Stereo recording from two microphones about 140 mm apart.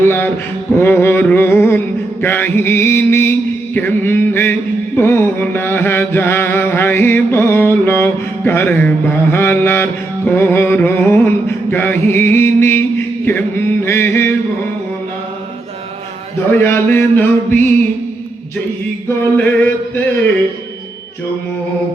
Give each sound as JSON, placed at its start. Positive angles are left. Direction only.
{"t": 0.0, "sound": "a sound", "side_deg": 20}
{"t": 0.8, "sound": "mantra", "side_deg": 15}
{"t": 16.5, "sound": "mantra", "side_deg": 15}
{"t": 19.0, "sound": "mantra", "side_deg": 15}